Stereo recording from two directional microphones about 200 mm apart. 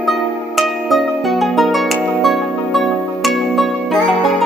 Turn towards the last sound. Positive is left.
turn(degrees=0)  # may be behind; listen again after turning